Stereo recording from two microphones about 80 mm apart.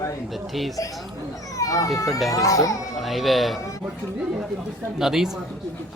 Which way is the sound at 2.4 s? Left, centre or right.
Left.